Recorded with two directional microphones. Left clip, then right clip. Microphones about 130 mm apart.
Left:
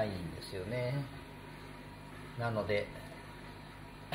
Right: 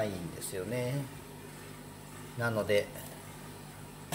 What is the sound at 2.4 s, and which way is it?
Speech, 25° right (ahead or behind).